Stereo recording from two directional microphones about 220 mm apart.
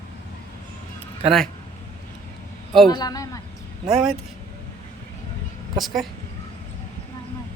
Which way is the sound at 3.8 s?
5° right (ahead or behind).